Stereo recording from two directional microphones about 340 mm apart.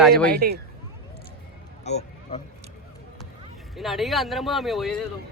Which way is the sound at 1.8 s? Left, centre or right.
Centre.